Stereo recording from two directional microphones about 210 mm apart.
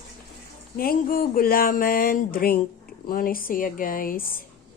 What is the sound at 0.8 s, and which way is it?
Speech, 45° left (ahead or behind).